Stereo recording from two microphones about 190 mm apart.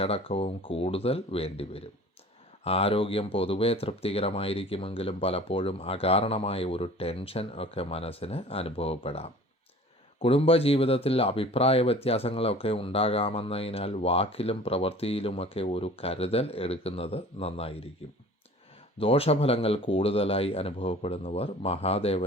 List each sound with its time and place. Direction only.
0.0 s speech: 30° left (ahead or behind)
18.9 s speech: 30° left (ahead or behind)